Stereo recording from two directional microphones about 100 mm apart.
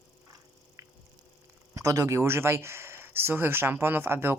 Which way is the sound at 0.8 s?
30° right (ahead or behind).